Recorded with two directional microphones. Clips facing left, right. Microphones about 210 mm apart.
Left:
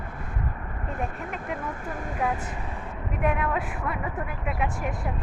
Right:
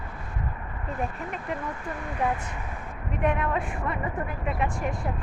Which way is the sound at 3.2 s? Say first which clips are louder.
Even; centre (ahead or behind).